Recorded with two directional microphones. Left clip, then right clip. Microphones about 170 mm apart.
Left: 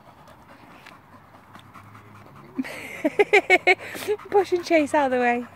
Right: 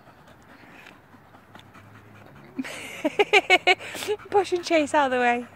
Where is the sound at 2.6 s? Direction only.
20° left (ahead or behind).